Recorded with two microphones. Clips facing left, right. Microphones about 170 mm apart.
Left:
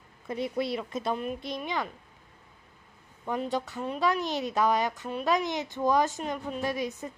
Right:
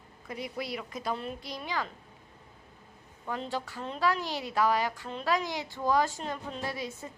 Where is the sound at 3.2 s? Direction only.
15° left (ahead or behind).